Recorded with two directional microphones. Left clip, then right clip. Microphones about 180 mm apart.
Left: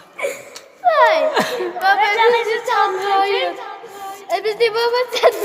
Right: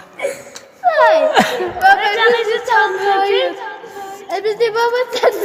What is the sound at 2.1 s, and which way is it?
Speech, 10° right (ahead or behind).